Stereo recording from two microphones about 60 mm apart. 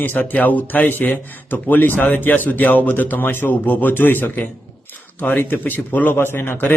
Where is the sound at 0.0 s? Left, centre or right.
Left.